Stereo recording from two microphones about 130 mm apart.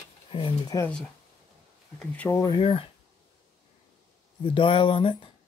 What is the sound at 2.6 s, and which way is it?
Speech, 50° left (ahead or behind).